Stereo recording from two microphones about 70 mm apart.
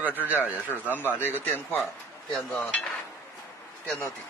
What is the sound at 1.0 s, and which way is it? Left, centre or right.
Speech, left.